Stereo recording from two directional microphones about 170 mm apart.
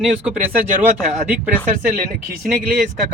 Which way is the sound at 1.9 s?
60° right (ahead or behind).